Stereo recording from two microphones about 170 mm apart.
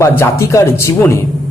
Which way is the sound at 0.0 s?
15° left (ahead or behind).